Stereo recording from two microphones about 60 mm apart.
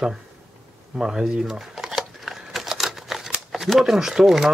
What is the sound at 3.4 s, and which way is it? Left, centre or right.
Speech, centre.